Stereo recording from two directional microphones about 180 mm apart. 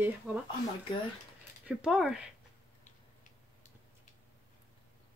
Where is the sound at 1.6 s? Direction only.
5° right (ahead or behind).